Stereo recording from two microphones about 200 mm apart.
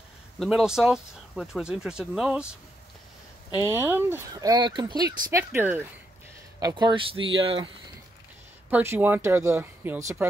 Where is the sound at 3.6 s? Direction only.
10° right (ahead or behind).